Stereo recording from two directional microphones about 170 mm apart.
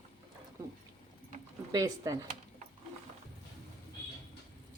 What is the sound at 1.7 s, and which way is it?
Speech, 20° right (ahead or behind).